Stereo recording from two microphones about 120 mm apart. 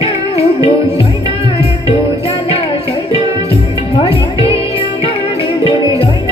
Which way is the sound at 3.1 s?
50° left (ahead or behind).